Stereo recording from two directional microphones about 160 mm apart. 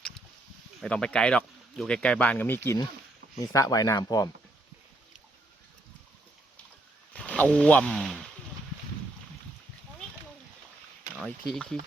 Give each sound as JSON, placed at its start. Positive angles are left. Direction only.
{"t": 0.8, "sound": "speech", "side_deg": 5}
{"t": 7.1, "sound": "speech", "side_deg": 10}
{"t": 11.2, "sound": "speech", "side_deg": 5}